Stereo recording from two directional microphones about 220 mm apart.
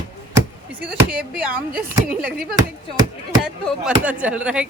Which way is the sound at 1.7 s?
40° right (ahead or behind).